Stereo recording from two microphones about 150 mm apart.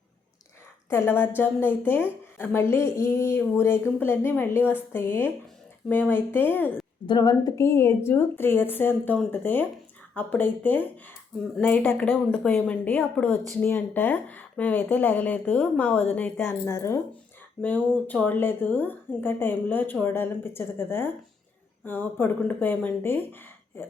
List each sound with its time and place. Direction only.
0.9 s a woman's voice: 15° left (ahead or behind)
7.1 s a woman's voice: 25° left (ahead or behind)